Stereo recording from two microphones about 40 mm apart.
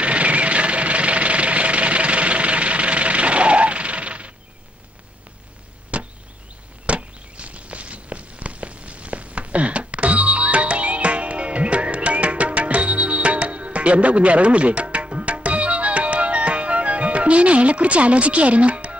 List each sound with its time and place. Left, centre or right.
0.0 s engine: right
5.9 s chop: right
6.9 s a sound: right